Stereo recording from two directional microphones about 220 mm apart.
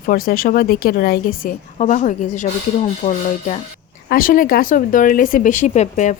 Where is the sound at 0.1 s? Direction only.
40° left (ahead or behind).